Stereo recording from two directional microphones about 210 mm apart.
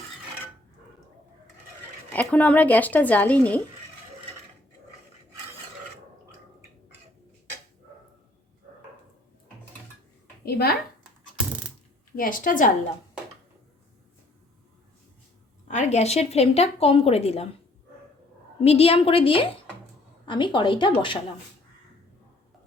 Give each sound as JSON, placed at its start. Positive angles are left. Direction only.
{"t": 2.1, "sound": "a woman's voice", "side_deg": 5}
{"t": 10.4, "sound": "a sound", "side_deg": 50}
{"t": 12.1, "sound": "a woman's voice", "side_deg": 40}
{"t": 15.6, "sound": "speech", "side_deg": 35}
{"t": 18.6, "sound": "speech", "side_deg": 30}